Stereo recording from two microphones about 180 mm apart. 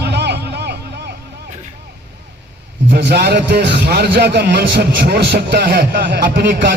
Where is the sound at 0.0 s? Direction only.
70° right (ahead or behind).